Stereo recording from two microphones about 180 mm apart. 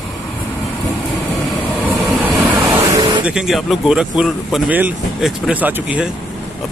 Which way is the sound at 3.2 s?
5° right (ahead or behind).